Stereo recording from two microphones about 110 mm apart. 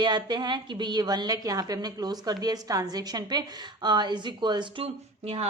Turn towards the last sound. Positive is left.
turn(degrees=-65)  # may be behind; listen again after turning